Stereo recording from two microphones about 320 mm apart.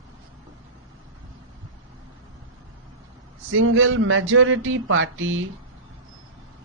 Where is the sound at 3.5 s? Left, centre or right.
Right.